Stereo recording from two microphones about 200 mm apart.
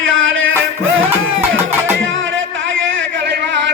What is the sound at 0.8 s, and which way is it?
Music, 80° right.